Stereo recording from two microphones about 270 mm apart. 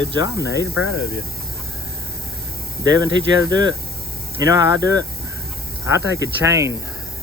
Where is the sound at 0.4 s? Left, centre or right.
Left.